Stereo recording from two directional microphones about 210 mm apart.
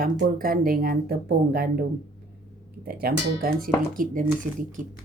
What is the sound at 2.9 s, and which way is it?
A woman's voice, 45° right (ahead or behind).